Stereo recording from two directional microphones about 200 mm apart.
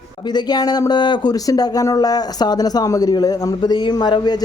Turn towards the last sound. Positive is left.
turn(degrees=20)  # may be behind; listen again after turning